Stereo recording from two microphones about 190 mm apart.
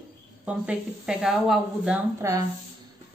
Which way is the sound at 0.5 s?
5° right (ahead or behind).